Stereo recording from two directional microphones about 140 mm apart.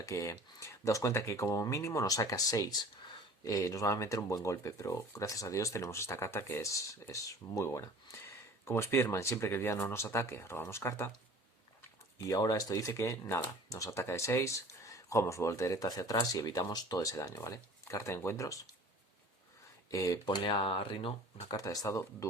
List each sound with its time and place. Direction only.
0.0 s speech: 20° left (ahead or behind)
12.3 s speech: 25° left (ahead or behind)
19.9 s speech: 25° left (ahead or behind); by 21.4 s 40° left (ahead or behind)
21.4 s speech: 25° left (ahead or behind)